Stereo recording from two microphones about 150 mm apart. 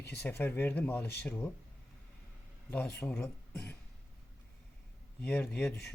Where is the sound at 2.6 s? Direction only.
10° left (ahead or behind).